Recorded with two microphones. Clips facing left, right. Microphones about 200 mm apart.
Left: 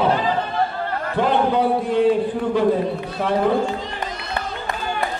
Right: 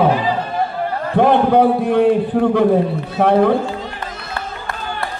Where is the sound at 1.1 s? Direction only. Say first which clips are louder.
Right 6 dB; 60° right (ahead or behind).